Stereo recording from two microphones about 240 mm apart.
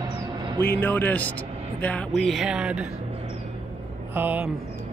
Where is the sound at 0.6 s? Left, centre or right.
Centre.